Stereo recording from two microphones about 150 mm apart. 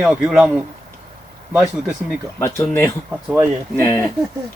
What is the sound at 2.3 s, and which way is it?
Speech, 15° left (ahead or behind).